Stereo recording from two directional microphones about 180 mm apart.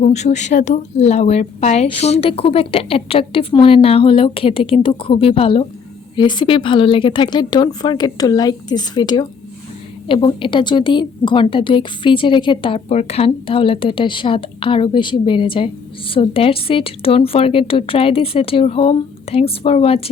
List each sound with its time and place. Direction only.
0.0 s a woman's voice: 40° left (ahead or behind)